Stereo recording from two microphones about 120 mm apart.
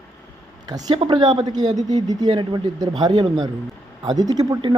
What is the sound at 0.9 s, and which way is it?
Speech, 45° right (ahead or behind).